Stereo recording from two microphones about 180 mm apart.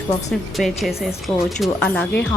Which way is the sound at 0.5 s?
Centre (ahead or behind).